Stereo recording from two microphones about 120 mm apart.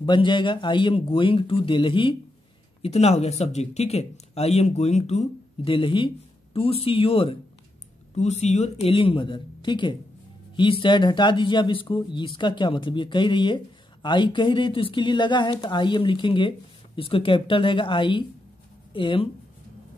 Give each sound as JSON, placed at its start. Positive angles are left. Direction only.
{"t": 0.0, "sound": "speech", "side_deg": 40}
{"t": 2.8, "sound": "speech", "side_deg": 60}
{"t": 5.7, "sound": "speech", "side_deg": 45}
{"t": 8.1, "sound": "speech", "side_deg": 70}
{"t": 8.9, "sound": "speech", "side_deg": 45}